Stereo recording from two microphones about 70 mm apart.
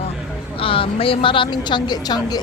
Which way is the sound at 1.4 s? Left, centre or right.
Left.